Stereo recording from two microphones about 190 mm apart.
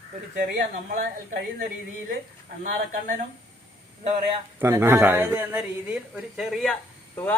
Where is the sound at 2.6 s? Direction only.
45° right (ahead or behind).